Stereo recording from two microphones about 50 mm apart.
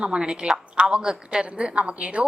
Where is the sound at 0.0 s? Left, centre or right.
Centre.